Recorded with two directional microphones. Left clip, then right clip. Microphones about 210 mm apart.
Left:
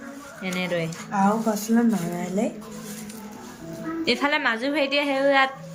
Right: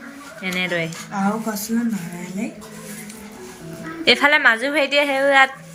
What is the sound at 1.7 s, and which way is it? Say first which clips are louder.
Speech: left 2 dB; 20° left (ahead or behind).